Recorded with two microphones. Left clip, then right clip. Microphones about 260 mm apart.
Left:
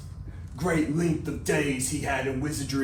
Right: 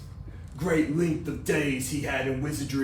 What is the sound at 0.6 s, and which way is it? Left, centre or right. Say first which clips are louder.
Speech: right 1 dB; centre.